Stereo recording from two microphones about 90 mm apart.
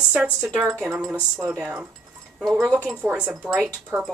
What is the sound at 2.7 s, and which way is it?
Speech, 15° right (ahead or behind).